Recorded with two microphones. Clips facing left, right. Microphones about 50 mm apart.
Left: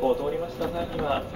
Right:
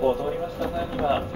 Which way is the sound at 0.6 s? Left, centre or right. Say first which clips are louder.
Right 2 dB; centre.